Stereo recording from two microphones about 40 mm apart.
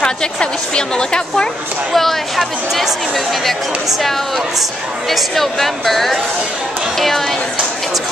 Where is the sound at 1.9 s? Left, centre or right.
Centre.